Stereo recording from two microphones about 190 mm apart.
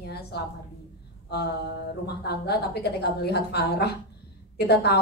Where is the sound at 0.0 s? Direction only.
60° left (ahead or behind).